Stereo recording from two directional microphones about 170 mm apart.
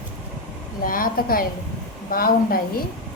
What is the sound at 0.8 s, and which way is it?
A woman's voice, 55° left (ahead or behind).